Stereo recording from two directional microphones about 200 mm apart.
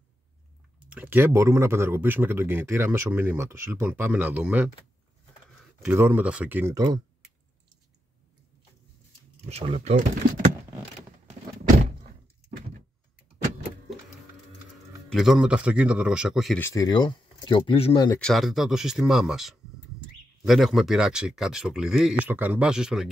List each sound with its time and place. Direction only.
0.8 s speech: 10° right (ahead or behind)
5.8 s speech: 10° right (ahead or behind)
9.5 s speech: 30° right (ahead or behind)
11.8 s door: 35° right (ahead or behind)
15.0 s speech: centre (ahead or behind)
16.6 s speech: 15° left (ahead or behind)
18.2 s speech: centre (ahead or behind)